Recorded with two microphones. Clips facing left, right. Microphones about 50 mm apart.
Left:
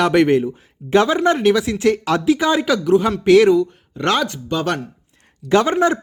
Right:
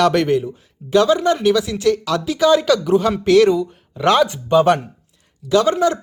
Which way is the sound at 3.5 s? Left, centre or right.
Centre.